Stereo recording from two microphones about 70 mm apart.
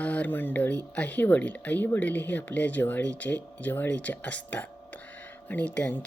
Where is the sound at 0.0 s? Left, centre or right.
Left.